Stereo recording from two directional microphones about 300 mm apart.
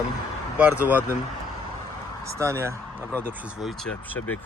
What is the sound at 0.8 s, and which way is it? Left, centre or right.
Speech, centre.